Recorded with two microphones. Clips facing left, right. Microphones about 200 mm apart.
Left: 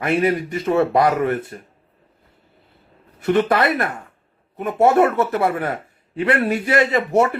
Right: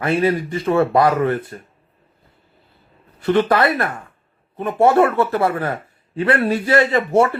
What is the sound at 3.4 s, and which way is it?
A man's voice, 25° left (ahead or behind).